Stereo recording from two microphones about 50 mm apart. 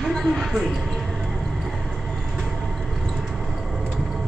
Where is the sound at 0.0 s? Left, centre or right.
Centre.